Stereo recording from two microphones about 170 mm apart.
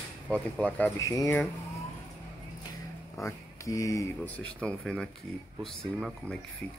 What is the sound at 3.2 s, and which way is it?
Speech, 20° left (ahead or behind).